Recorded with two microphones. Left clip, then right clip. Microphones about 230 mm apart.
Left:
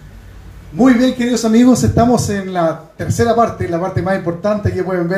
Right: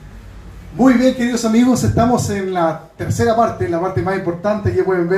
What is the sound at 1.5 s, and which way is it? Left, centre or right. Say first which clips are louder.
Speech: left 4 dB; left.